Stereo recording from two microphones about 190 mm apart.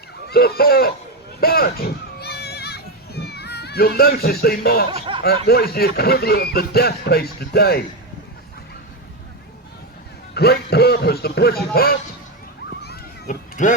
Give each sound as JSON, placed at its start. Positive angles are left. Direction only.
{"t": 0.3, "sound": "speech", "side_deg": 55}
{"t": 1.4, "sound": "children playing", "side_deg": 50}
{"t": 4.9, "sound": "speech", "side_deg": -25}
{"t": 5.2, "sound": "speech", "side_deg": 55}
{"t": 10.3, "sound": "speech", "side_deg": 55}
{"t": 12.8, "sound": "children playing", "side_deg": 55}
{"t": 13.6, "sound": "speech", "side_deg": 40}